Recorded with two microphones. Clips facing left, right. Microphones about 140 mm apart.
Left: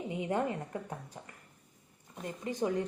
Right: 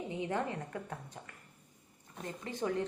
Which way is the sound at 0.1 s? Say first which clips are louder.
Left 4 dB; 15° left (ahead or behind).